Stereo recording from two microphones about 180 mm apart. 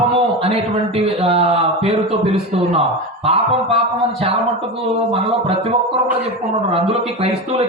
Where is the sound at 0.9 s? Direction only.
35° right (ahead or behind).